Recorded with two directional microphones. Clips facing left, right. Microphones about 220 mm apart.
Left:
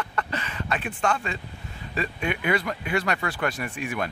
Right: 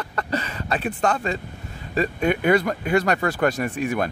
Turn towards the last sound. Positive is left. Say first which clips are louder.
# right 6 dB
turn(degrees=-40)  # may be behind; listen again after turning